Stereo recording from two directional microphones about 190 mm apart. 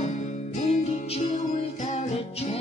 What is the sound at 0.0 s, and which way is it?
Music, 40° left (ahead or behind).